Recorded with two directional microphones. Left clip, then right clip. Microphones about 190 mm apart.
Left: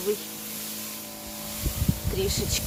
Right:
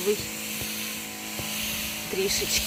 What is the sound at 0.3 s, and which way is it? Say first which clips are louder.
Vehicle: right 5 dB; 50° left (ahead or behind).